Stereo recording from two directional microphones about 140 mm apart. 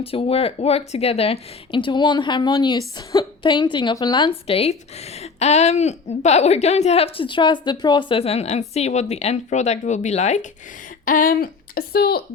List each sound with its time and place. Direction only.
0.0 s speech: 45° left (ahead or behind)
11.0 s speech: 75° left (ahead or behind)